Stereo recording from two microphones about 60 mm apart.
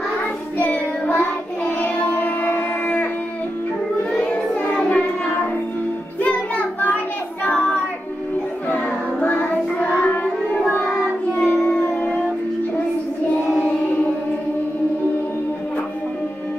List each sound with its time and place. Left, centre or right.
0.6 s child singing: left
1.8 s music: left
4.2 s child singing: left
6.2 s music: left
8.6 s music: left